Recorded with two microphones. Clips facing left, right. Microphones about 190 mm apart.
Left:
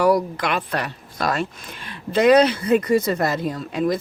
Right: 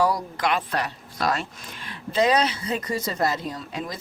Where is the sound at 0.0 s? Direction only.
65° left (ahead or behind).